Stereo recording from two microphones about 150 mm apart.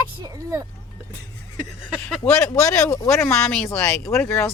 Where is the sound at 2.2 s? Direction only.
20° left (ahead or behind).